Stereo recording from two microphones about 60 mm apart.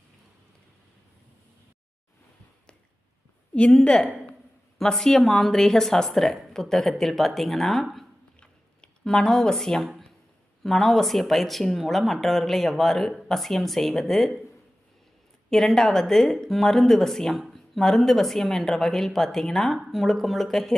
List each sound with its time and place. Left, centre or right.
3.5 s a woman's voice: centre
8.4 s a sound: centre
10.6 s speech: centre
15.4 s speech: centre